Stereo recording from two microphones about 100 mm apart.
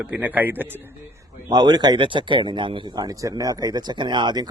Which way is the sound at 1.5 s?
45° right (ahead or behind).